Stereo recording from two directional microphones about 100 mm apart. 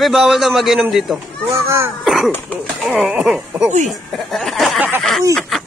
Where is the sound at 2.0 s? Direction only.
Centre (ahead or behind).